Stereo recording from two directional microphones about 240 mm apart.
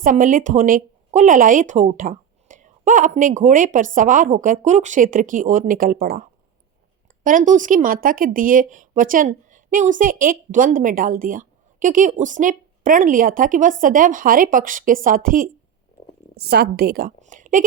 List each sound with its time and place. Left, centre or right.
0.0 s a woman's voice: right
7.3 s a woman's voice: right